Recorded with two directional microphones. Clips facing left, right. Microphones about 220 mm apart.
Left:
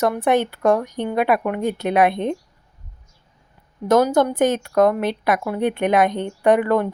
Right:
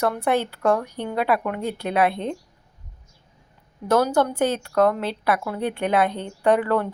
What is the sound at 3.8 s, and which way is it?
Speech, 15° left (ahead or behind).